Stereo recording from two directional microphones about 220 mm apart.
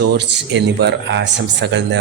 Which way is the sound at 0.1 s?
50° right (ahead or behind).